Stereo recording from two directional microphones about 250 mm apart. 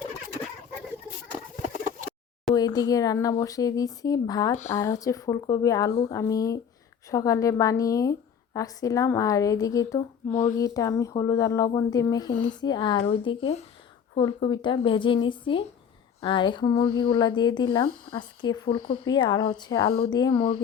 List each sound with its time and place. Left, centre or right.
2.6 s speech: centre
10.3 s speech: left
10.6 s a woman's voice: centre